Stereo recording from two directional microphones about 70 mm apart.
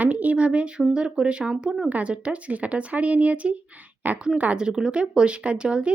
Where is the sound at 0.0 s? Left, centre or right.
Right.